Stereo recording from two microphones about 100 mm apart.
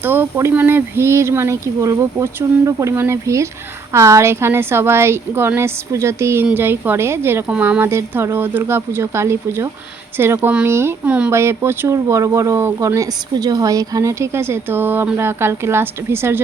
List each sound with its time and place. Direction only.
0.0 s speech: 20° right (ahead or behind)
11.0 s speech: 15° right (ahead or behind)
11.3 s speech: 25° right (ahead or behind)